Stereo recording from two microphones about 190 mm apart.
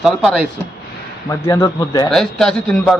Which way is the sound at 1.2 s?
15° left (ahead or behind).